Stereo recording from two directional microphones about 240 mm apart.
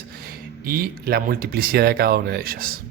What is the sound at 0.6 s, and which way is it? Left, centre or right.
Speech, right.